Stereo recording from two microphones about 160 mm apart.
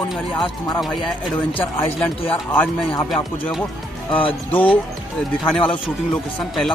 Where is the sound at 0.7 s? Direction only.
Centre (ahead or behind).